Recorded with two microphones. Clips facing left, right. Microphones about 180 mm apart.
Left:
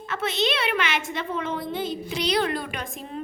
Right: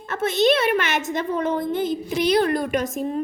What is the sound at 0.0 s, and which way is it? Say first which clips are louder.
A woman's voice: right 6 dB; 50° right (ahead or behind).